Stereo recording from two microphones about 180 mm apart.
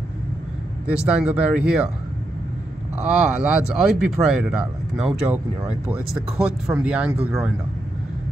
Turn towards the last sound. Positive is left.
turn(degrees=-5)  # may be behind; listen again after turning